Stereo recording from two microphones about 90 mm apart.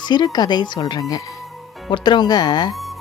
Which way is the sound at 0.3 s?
55° left (ahead or behind).